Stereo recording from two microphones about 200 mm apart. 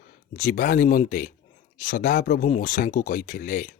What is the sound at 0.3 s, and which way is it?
Speech, 45° left (ahead or behind).